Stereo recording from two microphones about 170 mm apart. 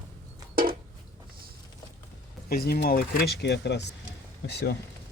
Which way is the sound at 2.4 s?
65° left (ahead or behind).